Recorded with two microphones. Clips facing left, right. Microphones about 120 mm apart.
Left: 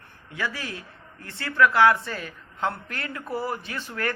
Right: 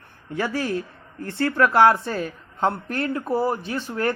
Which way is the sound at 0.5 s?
30° right (ahead or behind).